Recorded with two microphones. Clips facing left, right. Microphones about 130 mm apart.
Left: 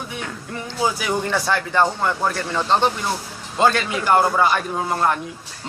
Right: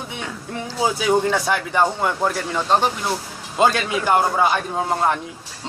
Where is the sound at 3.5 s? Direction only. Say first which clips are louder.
Even; 15° right (ahead or behind).